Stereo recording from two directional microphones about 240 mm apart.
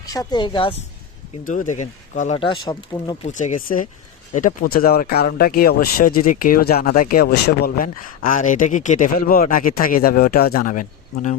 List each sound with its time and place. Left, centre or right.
0.0 s speech: centre
1.5 s speech: left
3.2 s speech: left